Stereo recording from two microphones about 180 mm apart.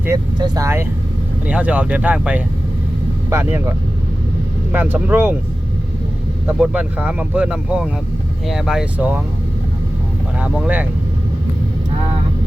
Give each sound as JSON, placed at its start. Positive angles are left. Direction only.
{"t": 0.0, "sound": "speech", "side_deg": -20}
{"t": 4.7, "sound": "speech", "side_deg": -10}
{"t": 6.5, "sound": "speech", "side_deg": -5}
{"t": 10.3, "sound": "speech", "side_deg": -5}